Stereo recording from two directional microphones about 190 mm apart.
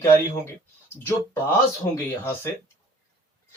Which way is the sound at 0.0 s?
15° left (ahead or behind).